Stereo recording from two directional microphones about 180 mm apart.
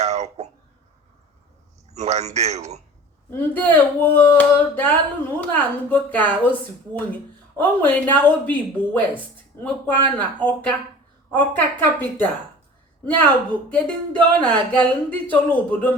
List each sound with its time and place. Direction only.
0.0 s cough: 40° right (ahead or behind)
1.9 s a man's voice: 40° right (ahead or behind)
3.2 s speech: 10° left (ahead or behind)
7.8 s speech: 10° left (ahead or behind)
13.7 s speech: 5° left (ahead or behind)